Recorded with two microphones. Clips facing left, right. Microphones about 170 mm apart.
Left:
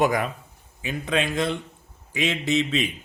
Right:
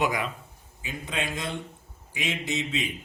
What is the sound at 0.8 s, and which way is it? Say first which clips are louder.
A man's voice: left 7 dB; 70° left (ahead or behind).